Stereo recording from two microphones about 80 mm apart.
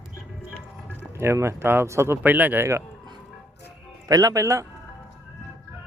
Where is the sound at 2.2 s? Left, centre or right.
Centre.